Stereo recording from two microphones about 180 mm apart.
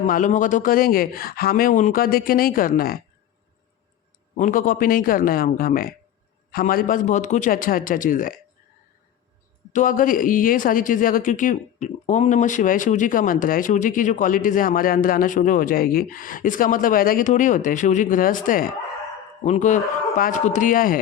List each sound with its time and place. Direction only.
0.0 s a man's voice: 45° left (ahead or behind)
4.4 s a man's voice: 45° left (ahead or behind)
9.7 s a man's voice: 50° left (ahead or behind)